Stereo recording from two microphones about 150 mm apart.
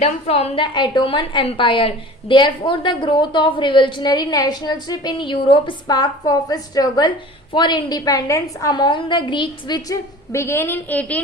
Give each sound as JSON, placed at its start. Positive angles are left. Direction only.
{"t": 0.0, "sound": "a woman's voice", "side_deg": 45}